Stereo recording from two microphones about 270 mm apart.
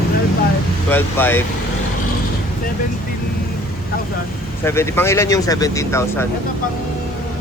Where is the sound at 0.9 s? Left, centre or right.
Centre.